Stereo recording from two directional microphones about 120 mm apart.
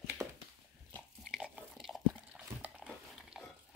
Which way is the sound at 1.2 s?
5° right (ahead or behind).